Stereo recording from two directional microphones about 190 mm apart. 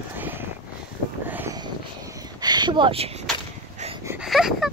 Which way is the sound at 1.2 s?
10° right (ahead or behind).